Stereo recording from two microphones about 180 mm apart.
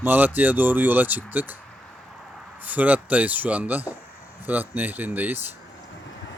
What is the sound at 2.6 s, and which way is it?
Speech, 10° right (ahead or behind).